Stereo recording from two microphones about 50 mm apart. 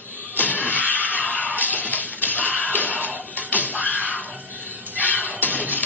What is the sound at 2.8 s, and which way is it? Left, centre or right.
Music, right.